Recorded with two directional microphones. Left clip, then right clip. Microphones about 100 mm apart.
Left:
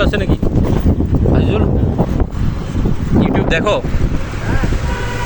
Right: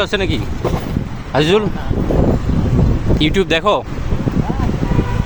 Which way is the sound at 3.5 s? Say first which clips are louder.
Even; 70° right (ahead or behind).